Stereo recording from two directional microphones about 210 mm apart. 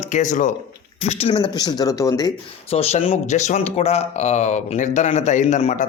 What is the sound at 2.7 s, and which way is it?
Speech, 30° left (ahead or behind).